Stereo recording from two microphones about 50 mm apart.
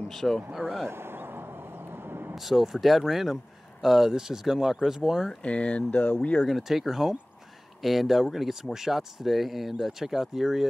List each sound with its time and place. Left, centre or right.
0.1 s speech: centre
0.8 s a sound: right
2.3 s speech: centre
5.3 s speech: left
6.4 s speech: centre